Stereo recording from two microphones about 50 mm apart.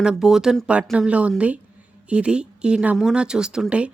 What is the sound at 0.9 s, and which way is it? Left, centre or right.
A woman's voice, right.